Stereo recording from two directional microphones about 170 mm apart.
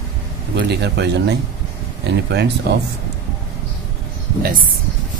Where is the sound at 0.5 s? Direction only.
80° right.